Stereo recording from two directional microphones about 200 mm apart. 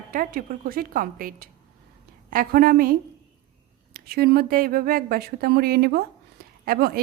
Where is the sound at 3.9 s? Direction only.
50° right (ahead or behind).